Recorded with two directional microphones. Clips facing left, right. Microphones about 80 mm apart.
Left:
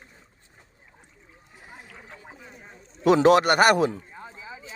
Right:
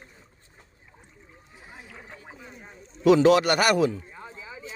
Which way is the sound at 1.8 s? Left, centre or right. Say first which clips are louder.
Right 1 dB; centre.